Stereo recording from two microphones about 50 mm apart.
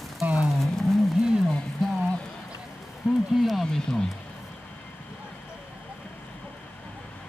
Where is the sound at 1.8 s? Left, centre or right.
Centre.